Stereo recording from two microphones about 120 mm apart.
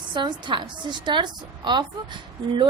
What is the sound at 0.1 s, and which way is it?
A woman's voice, 40° right (ahead or behind).